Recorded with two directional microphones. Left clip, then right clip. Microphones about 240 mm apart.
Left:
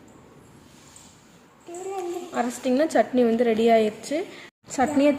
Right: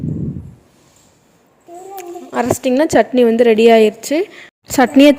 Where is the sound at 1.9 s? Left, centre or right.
Right.